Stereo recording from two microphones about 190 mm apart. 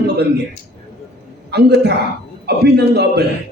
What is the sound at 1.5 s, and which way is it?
Speech, 60° right (ahead or behind).